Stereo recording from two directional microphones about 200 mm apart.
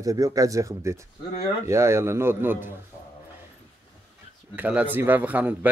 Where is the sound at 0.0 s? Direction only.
15° right (ahead or behind).